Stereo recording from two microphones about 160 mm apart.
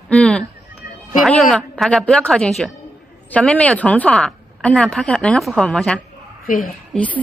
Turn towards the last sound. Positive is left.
turn(degrees=10)  # may be behind; listen again after turning